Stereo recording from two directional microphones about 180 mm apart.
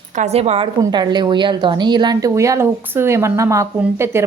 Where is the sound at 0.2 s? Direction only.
35° right (ahead or behind).